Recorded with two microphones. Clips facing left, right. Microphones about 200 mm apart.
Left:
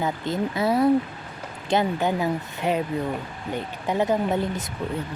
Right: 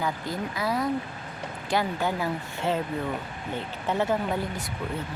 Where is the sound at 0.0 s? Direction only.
25° left (ahead or behind).